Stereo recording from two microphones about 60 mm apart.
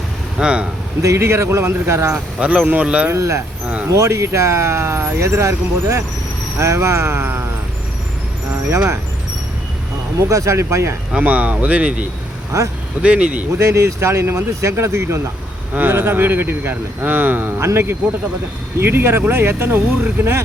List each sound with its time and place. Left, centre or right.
0.3 s speech: centre
1.0 s speech: right
2.1 s speech: centre
3.1 s speech: right
7.2 s speech: right
10.2 s speech: right
11.2 s speech: right
12.5 s speech: right
13.0 s speech: right
13.7 s speech: right
15.7 s speech: right
17.6 s speech: right